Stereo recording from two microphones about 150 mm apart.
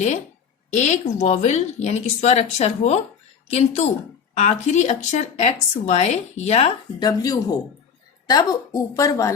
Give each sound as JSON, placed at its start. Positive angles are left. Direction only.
{"t": 0.7, "sound": "speech", "side_deg": 50}
{"t": 7.0, "sound": "speech", "side_deg": 25}